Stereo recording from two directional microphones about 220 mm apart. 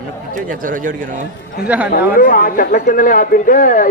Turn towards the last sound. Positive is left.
turn(degrees=40)  # may be behind; listen again after turning